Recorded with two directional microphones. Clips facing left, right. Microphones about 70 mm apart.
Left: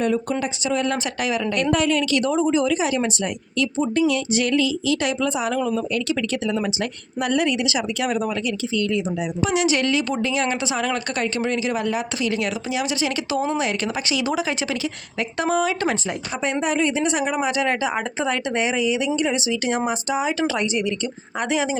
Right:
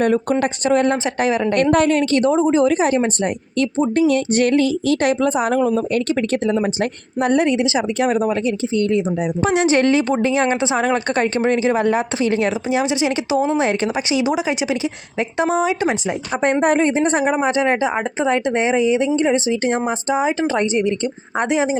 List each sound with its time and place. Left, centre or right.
0.0 s speech: right
0.9 s speech: right; by 16.1 s centre
16.4 s speech: right